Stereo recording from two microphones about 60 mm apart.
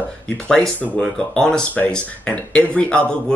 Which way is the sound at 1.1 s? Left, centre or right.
Centre.